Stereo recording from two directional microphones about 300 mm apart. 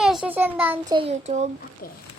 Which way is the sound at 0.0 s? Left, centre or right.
Centre.